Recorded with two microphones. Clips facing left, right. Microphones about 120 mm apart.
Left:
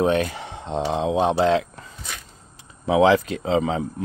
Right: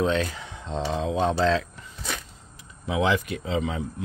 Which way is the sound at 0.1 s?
55° left (ahead or behind).